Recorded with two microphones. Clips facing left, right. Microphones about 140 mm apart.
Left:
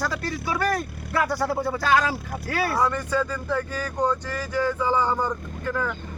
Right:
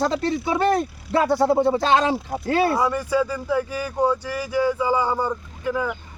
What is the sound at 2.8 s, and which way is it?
Speech, 10° right (ahead or behind).